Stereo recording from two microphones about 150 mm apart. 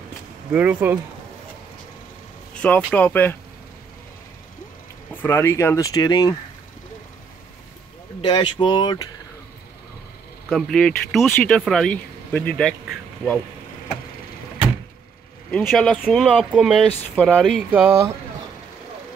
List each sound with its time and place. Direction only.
0.5 s speech: 10° right (ahead or behind)
2.5 s vehicle: 10° left (ahead or behind)
2.9 s speech: 10° left (ahead or behind)
5.1 s speech: 15° left (ahead or behind)
8.2 s speech: 30° left (ahead or behind)
10.5 s speech: centre (ahead or behind)
15.5 s speech: 5° left (ahead or behind)
17.6 s speech: 15° right (ahead or behind)